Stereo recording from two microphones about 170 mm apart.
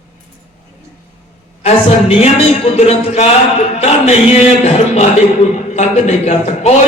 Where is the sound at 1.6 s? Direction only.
40° left (ahead or behind).